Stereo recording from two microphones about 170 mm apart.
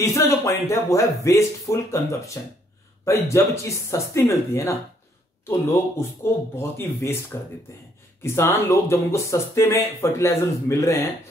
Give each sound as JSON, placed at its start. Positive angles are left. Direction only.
{"t": 0.0, "sound": "speech", "side_deg": 20}